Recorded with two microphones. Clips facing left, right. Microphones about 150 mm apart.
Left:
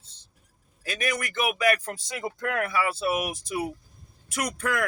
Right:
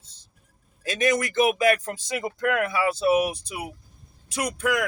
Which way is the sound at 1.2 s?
35° right (ahead or behind).